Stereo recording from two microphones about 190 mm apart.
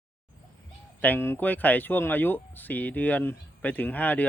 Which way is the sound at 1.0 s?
10° left (ahead or behind).